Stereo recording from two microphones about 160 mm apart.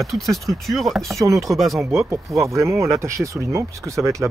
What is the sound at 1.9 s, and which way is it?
Speech, 15° right (ahead or behind).